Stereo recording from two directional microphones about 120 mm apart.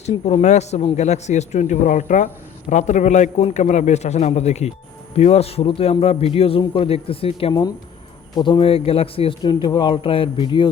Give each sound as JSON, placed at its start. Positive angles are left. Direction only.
{"t": 0.4, "sound": "a man's voice", "side_deg": 70}
{"t": 9.4, "sound": "speech", "side_deg": 40}